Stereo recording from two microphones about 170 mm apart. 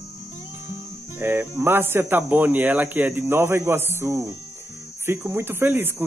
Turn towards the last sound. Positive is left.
turn(degrees=-10)  # may be behind; listen again after turning